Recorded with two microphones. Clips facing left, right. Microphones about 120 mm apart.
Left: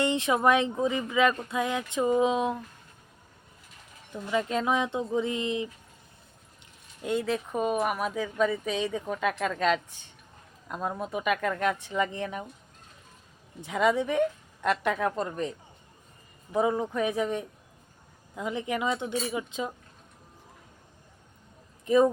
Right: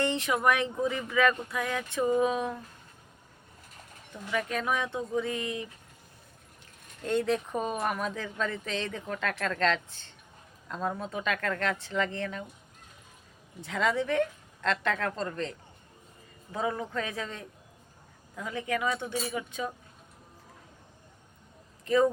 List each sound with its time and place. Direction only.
0.0 s speech: 20° left (ahead or behind)
4.1 s speech: 20° left (ahead or behind)
7.0 s speech: 5° left (ahead or behind)
13.6 s speech: 15° left (ahead or behind)
21.8 s speech: 20° left (ahead or behind)